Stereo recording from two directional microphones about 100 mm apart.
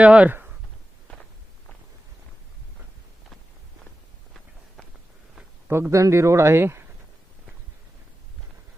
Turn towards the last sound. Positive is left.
turn(degrees=-25)  # may be behind; listen again after turning